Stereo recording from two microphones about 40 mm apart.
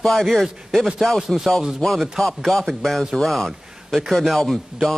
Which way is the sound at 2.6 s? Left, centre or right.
Centre.